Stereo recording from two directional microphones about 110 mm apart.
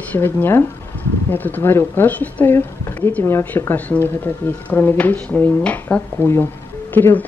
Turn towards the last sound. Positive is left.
turn(degrees=15)  # may be behind; listen again after turning